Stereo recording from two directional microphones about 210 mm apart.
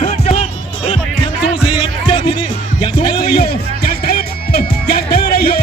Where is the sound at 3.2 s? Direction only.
45° left (ahead or behind).